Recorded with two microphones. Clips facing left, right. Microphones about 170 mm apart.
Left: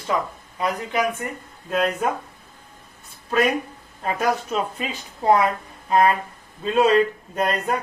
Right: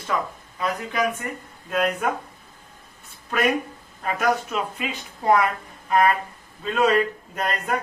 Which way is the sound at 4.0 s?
30° left (ahead or behind).